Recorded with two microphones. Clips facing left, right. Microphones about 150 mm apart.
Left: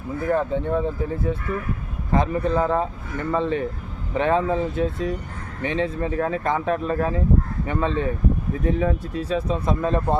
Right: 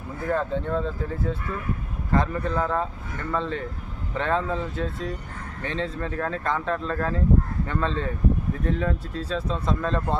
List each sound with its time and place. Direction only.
0.3 s speech: 15° left (ahead or behind)